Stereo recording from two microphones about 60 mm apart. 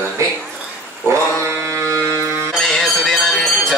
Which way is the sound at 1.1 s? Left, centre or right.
Right.